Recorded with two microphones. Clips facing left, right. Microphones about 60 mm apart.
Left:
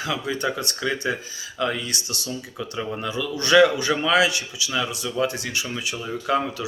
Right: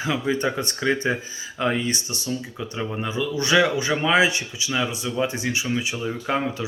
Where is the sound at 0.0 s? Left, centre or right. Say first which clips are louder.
Right 2 dB; right.